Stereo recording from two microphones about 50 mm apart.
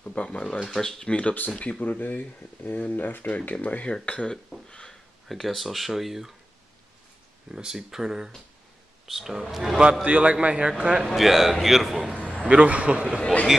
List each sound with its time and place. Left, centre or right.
0.0 s speech: left
0.7 s speech: centre
1.0 s speech: left
3.3 s speech: left
4.6 s a sound: centre
5.3 s speech: centre
7.5 s speech: centre
10.0 s a man's voice: right
11.1 s speech: centre
12.4 s a man's voice: right
13.2 s speech: left